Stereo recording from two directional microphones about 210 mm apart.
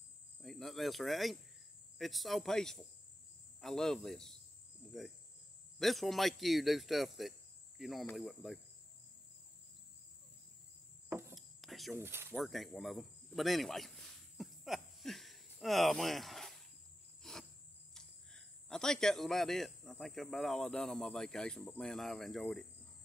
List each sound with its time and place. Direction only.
0.4 s cricket: centre (ahead or behind)
2.0 s speech: centre (ahead or behind)
5.8 s speech: centre (ahead or behind)
11.1 s insect: 10° right (ahead or behind)
11.3 s a sound: centre (ahead or behind)
12.0 s speech: 10° right (ahead or behind)
12.4 s speech: centre (ahead or behind)
17.2 s cricket: centre (ahead or behind)
17.9 s speech: 5° left (ahead or behind)